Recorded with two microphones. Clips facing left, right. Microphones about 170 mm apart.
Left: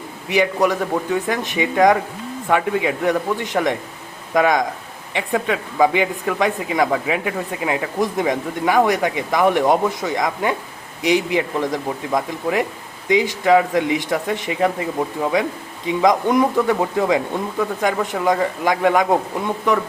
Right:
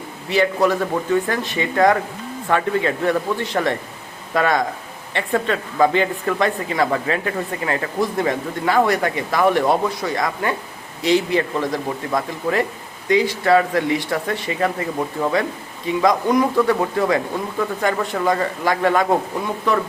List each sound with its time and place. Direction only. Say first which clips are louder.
0.3 s speech: even; 15° left (ahead or behind)